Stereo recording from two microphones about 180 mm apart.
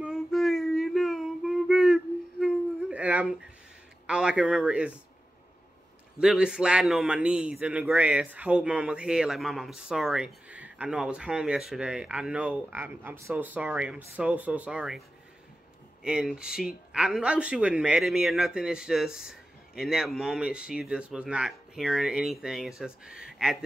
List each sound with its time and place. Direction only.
0.0 s a sound: centre (ahead or behind)
4.1 s a man's voice: 5° right (ahead or behind)
6.1 s a man's voice: 5° right (ahead or behind)